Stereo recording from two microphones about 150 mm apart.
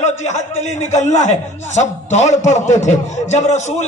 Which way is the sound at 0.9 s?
50° left (ahead or behind).